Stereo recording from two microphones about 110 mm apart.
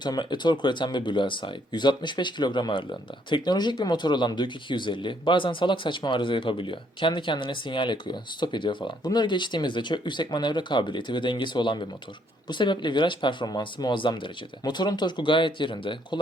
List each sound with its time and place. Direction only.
0.0 s speech: 45° left (ahead or behind)